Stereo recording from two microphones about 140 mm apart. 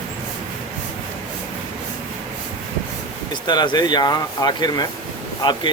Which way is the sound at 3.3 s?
35° left (ahead or behind).